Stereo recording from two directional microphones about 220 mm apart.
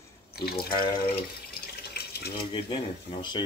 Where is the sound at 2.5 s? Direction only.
20° left (ahead or behind).